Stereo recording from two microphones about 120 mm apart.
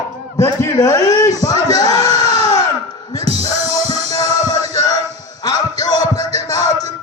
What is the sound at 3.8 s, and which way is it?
Music, 60° right (ahead or behind).